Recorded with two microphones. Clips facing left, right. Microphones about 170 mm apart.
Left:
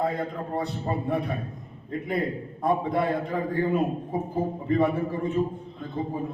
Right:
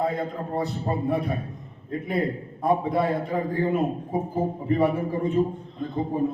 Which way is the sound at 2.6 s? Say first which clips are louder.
Right 2 dB; 5° right (ahead or behind).